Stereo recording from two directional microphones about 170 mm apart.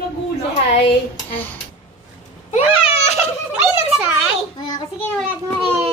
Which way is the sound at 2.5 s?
40° left (ahead or behind).